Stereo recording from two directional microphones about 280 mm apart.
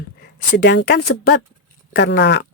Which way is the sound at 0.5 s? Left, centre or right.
Left.